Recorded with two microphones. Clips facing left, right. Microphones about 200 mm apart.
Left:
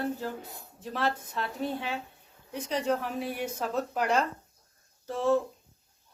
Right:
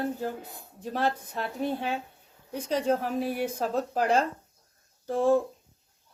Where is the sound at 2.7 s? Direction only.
30° right (ahead or behind).